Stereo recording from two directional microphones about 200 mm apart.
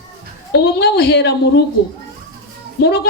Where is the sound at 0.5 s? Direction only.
55° left (ahead or behind).